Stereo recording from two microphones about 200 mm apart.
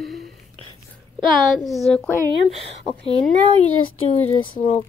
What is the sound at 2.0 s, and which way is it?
Speech, 15° right (ahead or behind).